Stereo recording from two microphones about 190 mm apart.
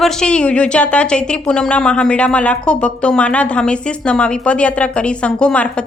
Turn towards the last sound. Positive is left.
turn(degrees=5)  # may be behind; listen again after turning